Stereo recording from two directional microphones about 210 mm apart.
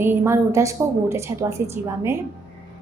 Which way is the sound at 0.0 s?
10° right (ahead or behind).